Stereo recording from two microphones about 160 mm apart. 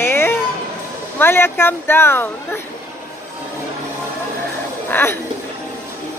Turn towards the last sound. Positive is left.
turn(degrees=15)  # may be behind; listen again after turning